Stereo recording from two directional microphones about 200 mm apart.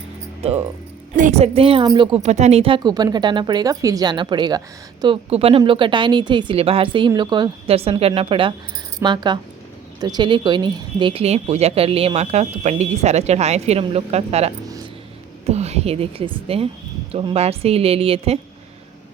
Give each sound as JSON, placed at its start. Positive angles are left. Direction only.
{"t": 0.4, "sound": "a woman's voice", "side_deg": -30}
{"t": 5.3, "sound": "a woman's voice", "side_deg": -30}